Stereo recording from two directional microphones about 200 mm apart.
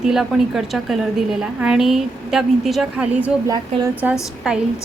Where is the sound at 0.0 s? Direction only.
Centre (ahead or behind).